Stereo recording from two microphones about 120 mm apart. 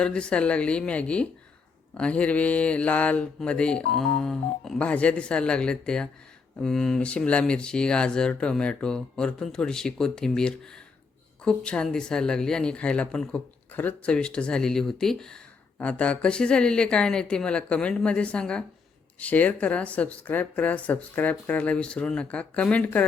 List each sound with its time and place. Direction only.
0.0 s mantra: 10° left (ahead or behind)